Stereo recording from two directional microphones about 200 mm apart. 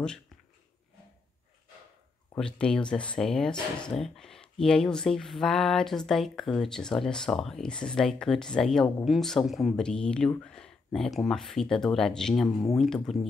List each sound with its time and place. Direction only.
2.3 s speech: 5° left (ahead or behind)